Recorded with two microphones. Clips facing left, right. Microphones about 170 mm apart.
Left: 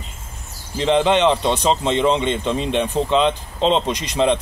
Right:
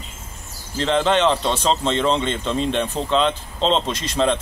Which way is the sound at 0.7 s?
15° left (ahead or behind).